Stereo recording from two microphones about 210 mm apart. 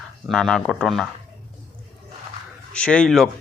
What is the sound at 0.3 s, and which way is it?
Speech, centre (ahead or behind).